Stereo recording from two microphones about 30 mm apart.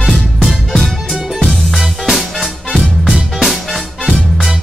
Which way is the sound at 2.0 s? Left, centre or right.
Centre.